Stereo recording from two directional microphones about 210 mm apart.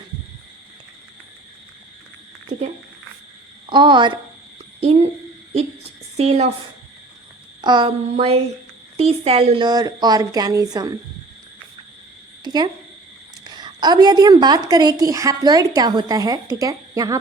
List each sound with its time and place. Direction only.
3.7 s a woman's voice: 20° right (ahead or behind)
6.1 s speech: 30° right (ahead or behind)
7.6 s a woman's voice: 20° right (ahead or behind)
12.5 s a woman's voice: 20° right (ahead or behind)